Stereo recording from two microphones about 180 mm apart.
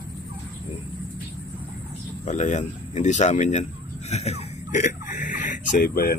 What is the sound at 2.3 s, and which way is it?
Speech, 40° left (ahead or behind).